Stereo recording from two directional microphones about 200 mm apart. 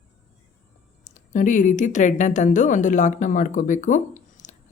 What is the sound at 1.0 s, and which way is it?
Speech, 40° left (ahead or behind).